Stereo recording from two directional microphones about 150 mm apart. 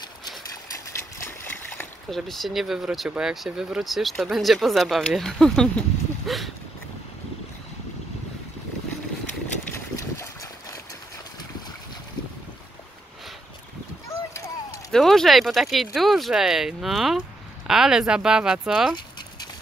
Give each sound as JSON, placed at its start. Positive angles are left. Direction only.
{"t": 0.9, "sound": "splash", "side_deg": 15}
{"t": 2.0, "sound": "speech", "side_deg": 0}
{"t": 9.9, "sound": "boat", "side_deg": 20}
{"t": 14.9, "sound": "speech", "side_deg": 0}